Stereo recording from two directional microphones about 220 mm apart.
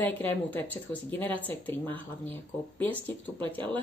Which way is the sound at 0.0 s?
10° left (ahead or behind).